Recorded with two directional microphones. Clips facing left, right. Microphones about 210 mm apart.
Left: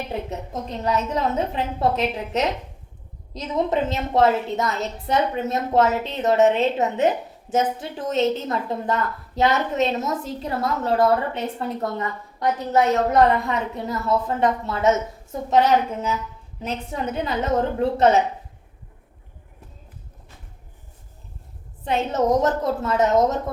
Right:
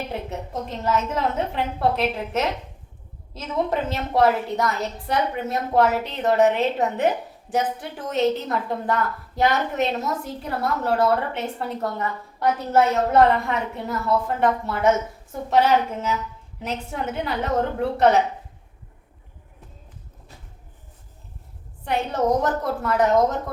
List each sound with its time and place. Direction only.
0.3 s a woman's voice: 20° left (ahead or behind)
21.8 s a woman's voice: 20° left (ahead or behind)